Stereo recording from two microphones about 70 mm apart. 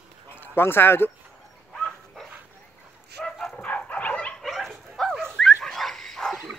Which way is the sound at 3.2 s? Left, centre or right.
Centre.